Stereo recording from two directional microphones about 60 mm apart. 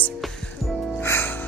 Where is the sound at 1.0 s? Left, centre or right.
Left.